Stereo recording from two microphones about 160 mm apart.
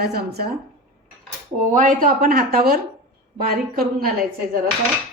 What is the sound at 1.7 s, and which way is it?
A woman's voice, 55° right (ahead or behind).